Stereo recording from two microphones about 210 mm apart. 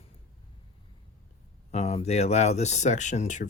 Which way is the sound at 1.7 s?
30° left (ahead or behind).